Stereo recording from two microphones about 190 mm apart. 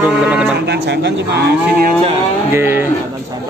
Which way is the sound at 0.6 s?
60° right (ahead or behind).